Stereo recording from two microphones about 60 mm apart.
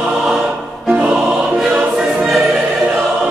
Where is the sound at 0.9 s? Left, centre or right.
Centre.